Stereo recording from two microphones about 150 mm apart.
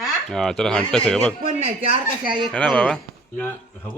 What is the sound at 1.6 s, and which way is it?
Speech, 40° right (ahead or behind).